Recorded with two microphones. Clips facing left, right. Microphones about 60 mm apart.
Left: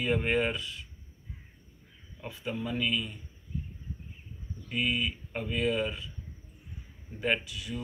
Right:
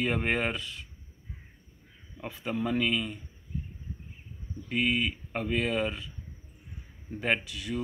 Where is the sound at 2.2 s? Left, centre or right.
Right.